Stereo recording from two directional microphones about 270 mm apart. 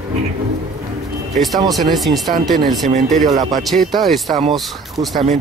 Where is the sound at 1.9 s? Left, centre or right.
Centre.